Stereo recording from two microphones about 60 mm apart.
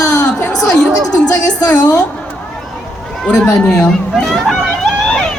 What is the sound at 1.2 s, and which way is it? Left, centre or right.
Speech, left.